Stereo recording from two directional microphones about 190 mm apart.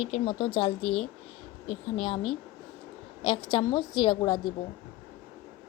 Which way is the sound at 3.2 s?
25° left (ahead or behind).